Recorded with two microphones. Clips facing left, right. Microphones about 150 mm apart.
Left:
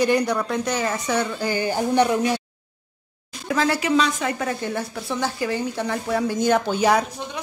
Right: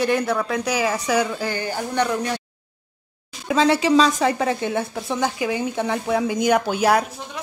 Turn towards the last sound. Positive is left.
turn(degrees=-5)  # may be behind; listen again after turning